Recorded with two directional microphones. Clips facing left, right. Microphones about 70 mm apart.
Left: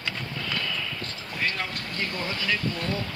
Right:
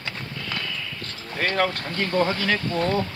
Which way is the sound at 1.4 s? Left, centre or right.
Right.